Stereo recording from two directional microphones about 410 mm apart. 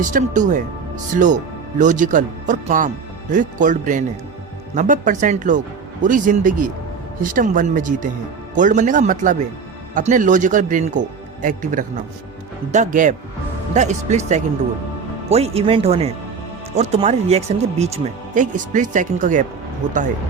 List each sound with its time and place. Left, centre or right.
0.1 s speech: centre